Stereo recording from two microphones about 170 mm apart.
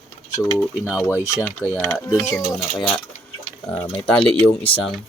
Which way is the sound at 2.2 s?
15° left (ahead or behind).